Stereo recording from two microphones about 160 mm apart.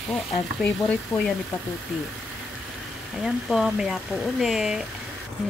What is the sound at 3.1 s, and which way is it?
Speech, centre (ahead or behind).